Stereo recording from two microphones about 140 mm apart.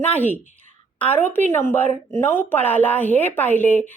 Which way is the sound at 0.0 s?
10° left (ahead or behind).